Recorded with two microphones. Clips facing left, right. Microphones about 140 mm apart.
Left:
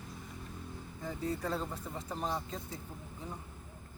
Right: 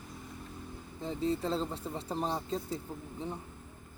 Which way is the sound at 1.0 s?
25° right (ahead or behind).